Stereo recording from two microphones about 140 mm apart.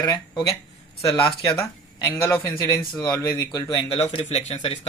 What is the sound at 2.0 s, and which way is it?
Speech, 25° left (ahead or behind).